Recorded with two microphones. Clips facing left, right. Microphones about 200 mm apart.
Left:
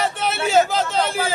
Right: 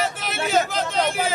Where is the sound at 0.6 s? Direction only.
30° left (ahead or behind).